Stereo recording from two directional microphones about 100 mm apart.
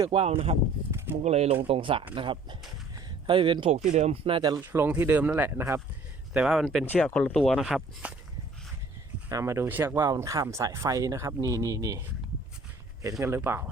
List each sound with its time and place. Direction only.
0.1 s speech: 80° right
0.9 s a sound: 25° right (ahead or behind)
1.2 s speech: 90° right
1.6 s speech: 70° right (ahead or behind)
3.9 s speech: 85° right
4.6 s speech: 25° right (ahead or behind)
6.3 s speech: 5° right (ahead or behind)
6.8 s speech: 15° left (ahead or behind); by 8.1 s 5° right (ahead or behind)
9.3 s speech: 30° right (ahead or behind)